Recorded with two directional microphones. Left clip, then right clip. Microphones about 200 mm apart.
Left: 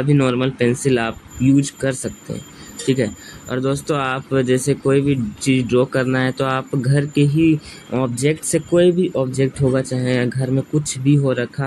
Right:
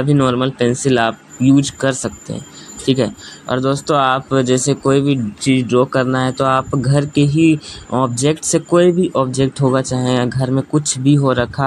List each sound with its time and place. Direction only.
0.0 s speech: 10° right (ahead or behind)